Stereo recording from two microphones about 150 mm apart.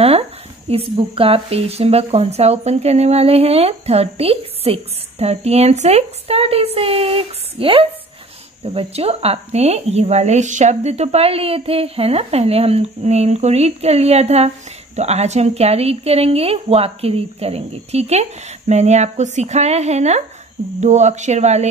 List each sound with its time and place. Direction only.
0.7 s speech: 40° right (ahead or behind)